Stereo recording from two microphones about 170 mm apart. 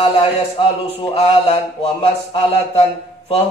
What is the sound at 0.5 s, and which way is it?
Speech, 35° left (ahead or behind).